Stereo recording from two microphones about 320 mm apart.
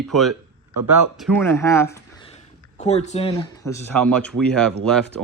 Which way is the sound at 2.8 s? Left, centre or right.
Left.